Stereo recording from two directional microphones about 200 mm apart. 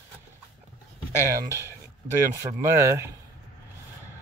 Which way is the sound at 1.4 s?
15° right (ahead or behind).